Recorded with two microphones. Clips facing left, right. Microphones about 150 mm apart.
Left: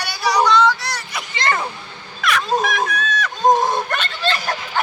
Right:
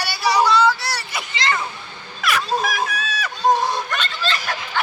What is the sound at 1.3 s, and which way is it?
Speech, 50° left (ahead or behind).